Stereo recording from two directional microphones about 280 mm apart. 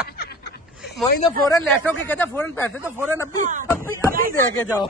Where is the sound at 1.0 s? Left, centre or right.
Centre.